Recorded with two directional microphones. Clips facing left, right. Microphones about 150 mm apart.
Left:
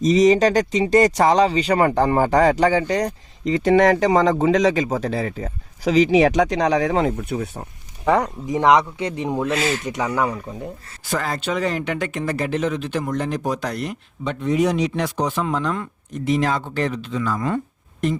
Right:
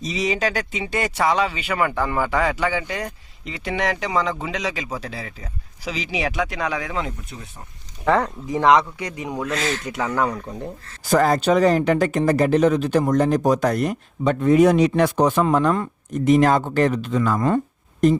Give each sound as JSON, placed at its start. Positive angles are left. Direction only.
{"t": 0.0, "sound": "speech", "side_deg": 45}
{"t": 8.0, "sound": "speech", "side_deg": 15}
{"t": 9.5, "sound": "speech", "side_deg": 10}
{"t": 11.1, "sound": "speech", "side_deg": -40}